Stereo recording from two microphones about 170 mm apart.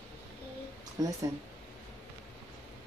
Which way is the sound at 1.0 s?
20° right (ahead or behind).